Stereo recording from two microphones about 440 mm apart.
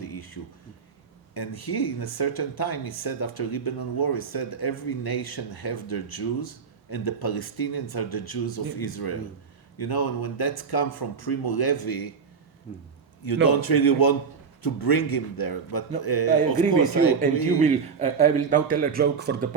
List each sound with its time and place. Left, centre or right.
0.0 s a sound: left
1.3 s speech: left
13.2 s speech: left
17.6 s a man's voice: centre